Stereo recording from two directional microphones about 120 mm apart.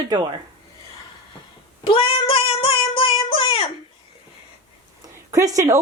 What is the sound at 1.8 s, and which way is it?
Child singing, 45° left (ahead or behind).